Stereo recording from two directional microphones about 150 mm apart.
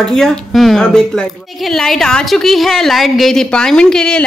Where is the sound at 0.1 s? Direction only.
5° left (ahead or behind).